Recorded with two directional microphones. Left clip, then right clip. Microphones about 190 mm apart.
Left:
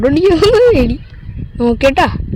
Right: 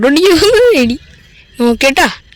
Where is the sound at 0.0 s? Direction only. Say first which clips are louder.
Right 2 dB; 10° right (ahead or behind).